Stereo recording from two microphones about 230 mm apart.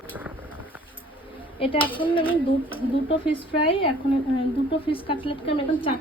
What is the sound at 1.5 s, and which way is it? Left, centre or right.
A woman's voice, left.